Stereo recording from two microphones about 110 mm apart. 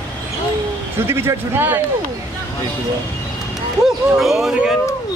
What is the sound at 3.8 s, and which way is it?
Speech, 5° right (ahead or behind).